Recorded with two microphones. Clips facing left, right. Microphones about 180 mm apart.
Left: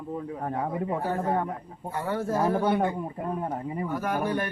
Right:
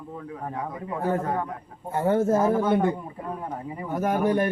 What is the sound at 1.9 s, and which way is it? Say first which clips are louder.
Speech: right 7 dB; 25° right (ahead or behind).